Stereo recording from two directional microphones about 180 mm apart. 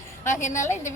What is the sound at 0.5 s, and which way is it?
Speech, 40° left (ahead or behind).